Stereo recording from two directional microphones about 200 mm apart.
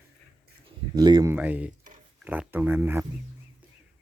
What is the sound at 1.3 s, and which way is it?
Speech, 10° right (ahead or behind).